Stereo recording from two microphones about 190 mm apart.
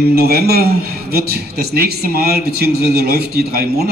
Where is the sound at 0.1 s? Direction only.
55° right (ahead or behind).